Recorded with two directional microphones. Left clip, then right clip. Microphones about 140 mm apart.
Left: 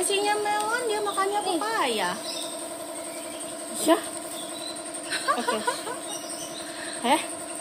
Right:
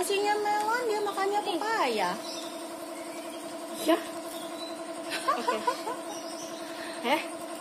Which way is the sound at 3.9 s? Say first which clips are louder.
Left 4 dB; 60° left (ahead or behind).